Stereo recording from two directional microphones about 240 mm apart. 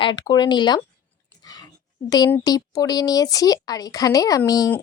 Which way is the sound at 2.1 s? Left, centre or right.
Centre.